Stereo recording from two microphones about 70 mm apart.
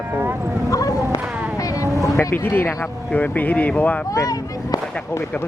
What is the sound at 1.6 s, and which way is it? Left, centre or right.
Vehicle, left.